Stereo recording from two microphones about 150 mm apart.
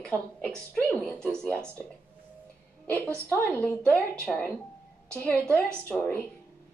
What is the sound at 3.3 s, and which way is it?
A woman's voice, 10° left (ahead or behind).